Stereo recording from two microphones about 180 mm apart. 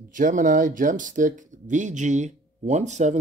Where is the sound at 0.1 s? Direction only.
45° right (ahead or behind).